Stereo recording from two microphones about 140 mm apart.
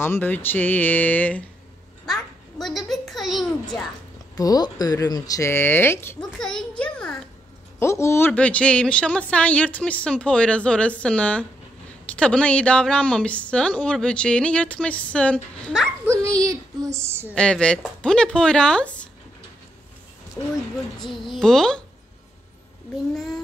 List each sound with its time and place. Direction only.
0.0 s a woman's voice: 15° left (ahead or behind)
2.0 s a sound: centre (ahead or behind)
4.4 s speech: 25° left (ahead or behind)
6.3 s a sound: 5° left (ahead or behind)
7.8 s a woman's voice: 20° left (ahead or behind)
16.1 s a sound: 20° right (ahead or behind)
17.4 s a woman's voice: 5° left (ahead or behind)
21.3 s a woman's voice: 5° left (ahead or behind)
23.1 s a woman's voice: centre (ahead or behind)